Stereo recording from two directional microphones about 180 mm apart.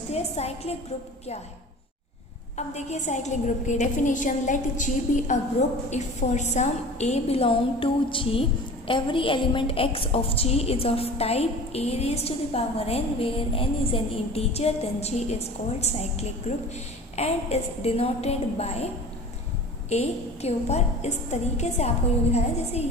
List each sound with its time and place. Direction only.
0.1 s a woman's voice: 35° left (ahead or behind)
2.6 s a woman's voice: 40° left (ahead or behind)
19.9 s a woman's voice: 35° left (ahead or behind)